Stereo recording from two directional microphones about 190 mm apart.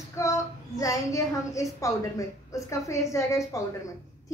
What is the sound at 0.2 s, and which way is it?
A woman's voice, 15° left (ahead or behind).